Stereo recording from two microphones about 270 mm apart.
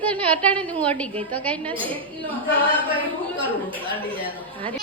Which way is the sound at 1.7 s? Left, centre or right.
Centre.